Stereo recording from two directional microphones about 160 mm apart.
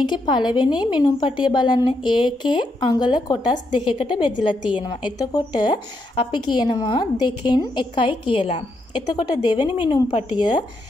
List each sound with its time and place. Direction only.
0.0 s a woman's voice: 30° left (ahead or behind)